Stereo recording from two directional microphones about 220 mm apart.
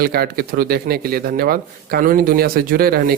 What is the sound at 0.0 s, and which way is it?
Speech, 45° right (ahead or behind).